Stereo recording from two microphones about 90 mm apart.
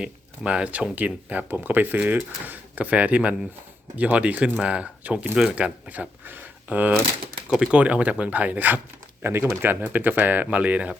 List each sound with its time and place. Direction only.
0.0 s speech: 10° right (ahead or behind)